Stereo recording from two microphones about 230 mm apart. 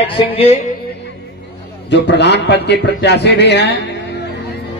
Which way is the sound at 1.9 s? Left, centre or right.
Left.